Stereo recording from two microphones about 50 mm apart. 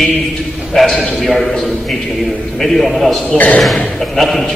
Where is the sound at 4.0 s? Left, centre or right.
Centre.